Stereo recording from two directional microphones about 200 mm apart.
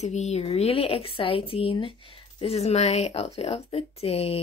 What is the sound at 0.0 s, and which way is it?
Speech, 35° left (ahead or behind).